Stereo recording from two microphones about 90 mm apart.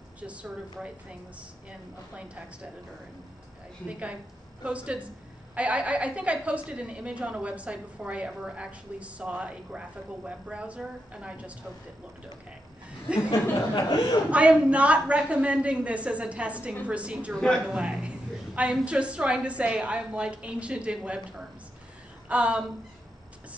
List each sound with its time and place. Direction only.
0.2 s a woman's voice: 15° right (ahead or behind)
3.8 s a woman's voice: 15° right (ahead or behind)
13.3 s a sound: 45° left (ahead or behind)
14.3 s a woman's voice: 15° right (ahead or behind)
17.3 s a woman's voice: 5° left (ahead or behind)
17.6 s a sound: 10° right (ahead or behind)
18.9 s a woman's voice: 15° right (ahead or behind)